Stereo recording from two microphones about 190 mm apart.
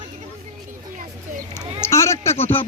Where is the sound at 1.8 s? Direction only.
15° left (ahead or behind).